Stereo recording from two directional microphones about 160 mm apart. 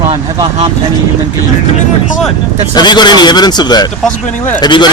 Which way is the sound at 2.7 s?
25° left (ahead or behind).